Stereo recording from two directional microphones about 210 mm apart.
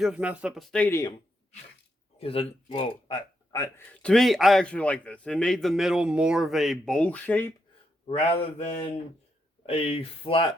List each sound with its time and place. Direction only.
0.0 s a man's voice: 5° right (ahead or behind); by 1.1 s 10° left (ahead or behind)
2.1 s a man's voice: 25° left (ahead or behind)
3.9 s a man's voice: 5° left (ahead or behind)
8.0 s speech: 25° left (ahead or behind)
9.6 s speech: 30° left (ahead or behind)